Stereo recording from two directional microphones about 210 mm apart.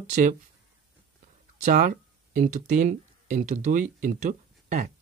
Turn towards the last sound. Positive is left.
turn(degrees=-40)  # may be behind; listen again after turning